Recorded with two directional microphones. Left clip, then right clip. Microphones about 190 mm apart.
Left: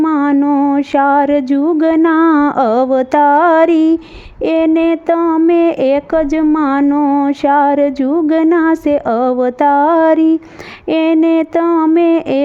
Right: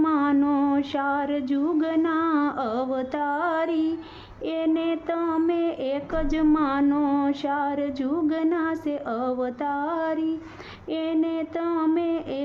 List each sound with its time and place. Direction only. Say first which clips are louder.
0.0 s mantra: left 9 dB; 40° left (ahead or behind)
0.3 s mantra: left 10 dB; 30° left (ahead or behind)
0.8 s a woman's voice: left 14 dB; 45° left (ahead or behind)